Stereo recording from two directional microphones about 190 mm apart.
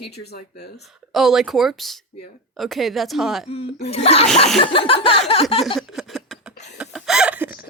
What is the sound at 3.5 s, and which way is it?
Speech, 30° left (ahead or behind).